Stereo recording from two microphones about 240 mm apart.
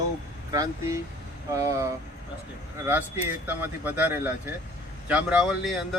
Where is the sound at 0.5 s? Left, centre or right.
Centre.